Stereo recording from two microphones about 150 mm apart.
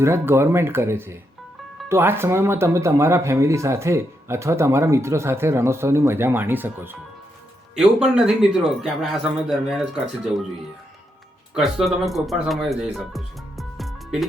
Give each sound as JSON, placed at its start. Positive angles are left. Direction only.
{"t": 0.0, "sound": "a man's voice", "side_deg": -15}
{"t": 11.5, "sound": "speech", "side_deg": 0}